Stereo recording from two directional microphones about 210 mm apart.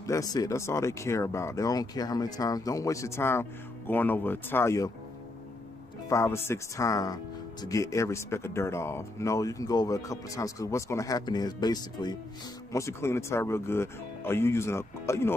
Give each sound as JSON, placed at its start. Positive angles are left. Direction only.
{"t": 0.0, "sound": "speech", "side_deg": 15}
{"t": 6.0, "sound": "speech", "side_deg": 15}